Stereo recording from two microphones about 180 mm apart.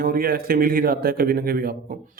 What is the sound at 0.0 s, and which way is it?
A man's voice, 55° right (ahead or behind).